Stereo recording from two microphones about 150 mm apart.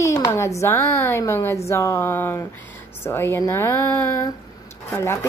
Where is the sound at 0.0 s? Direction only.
20° left (ahead or behind).